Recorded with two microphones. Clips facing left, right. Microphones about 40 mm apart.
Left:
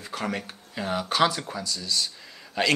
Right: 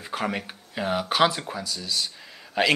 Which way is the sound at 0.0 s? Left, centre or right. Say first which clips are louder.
Right 2 dB; centre.